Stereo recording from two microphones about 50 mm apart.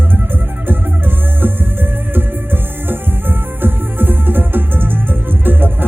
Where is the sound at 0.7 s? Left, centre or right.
Right.